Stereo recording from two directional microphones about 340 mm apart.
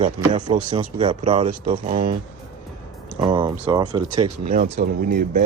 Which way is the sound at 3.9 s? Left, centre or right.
Right.